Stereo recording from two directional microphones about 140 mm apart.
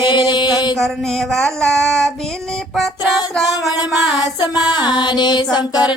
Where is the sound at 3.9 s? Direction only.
Centre (ahead or behind).